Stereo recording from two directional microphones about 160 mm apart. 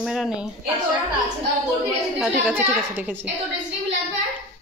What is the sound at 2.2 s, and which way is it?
A woman's voice, 10° right (ahead or behind).